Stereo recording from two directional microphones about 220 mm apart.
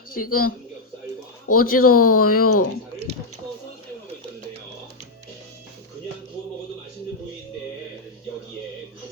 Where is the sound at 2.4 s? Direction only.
90° left.